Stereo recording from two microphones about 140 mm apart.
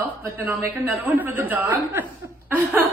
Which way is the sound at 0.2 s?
15° right (ahead or behind).